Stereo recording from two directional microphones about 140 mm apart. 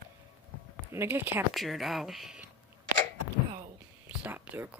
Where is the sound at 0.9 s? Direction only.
15° right (ahead or behind).